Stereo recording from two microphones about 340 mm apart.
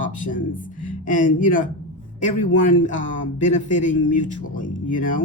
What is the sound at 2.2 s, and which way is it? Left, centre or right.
Speech, left.